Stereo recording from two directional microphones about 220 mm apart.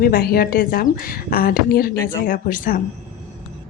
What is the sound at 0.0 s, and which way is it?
A woman's voice, 40° left (ahead or behind).